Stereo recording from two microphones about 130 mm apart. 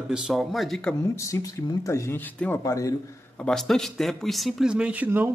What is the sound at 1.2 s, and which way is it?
Speech, 25° left (ahead or behind).